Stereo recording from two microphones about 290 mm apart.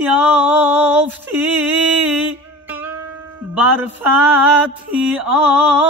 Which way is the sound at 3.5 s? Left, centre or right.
Centre.